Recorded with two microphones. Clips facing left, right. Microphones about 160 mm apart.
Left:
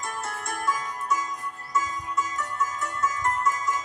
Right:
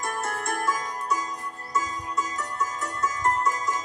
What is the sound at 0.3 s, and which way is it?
Music, 50° right (ahead or behind).